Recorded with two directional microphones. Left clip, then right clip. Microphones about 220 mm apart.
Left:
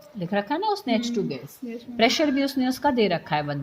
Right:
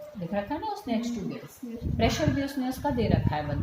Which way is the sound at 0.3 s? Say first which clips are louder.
Left 7 dB; 45° left (ahead or behind).